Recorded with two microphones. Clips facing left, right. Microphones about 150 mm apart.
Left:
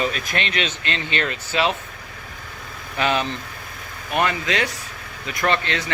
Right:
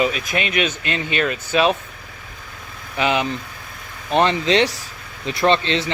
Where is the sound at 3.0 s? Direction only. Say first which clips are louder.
Right 2 dB; 15° right (ahead or behind).